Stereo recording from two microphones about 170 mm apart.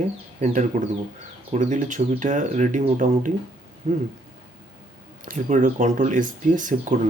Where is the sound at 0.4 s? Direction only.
45° right (ahead or behind).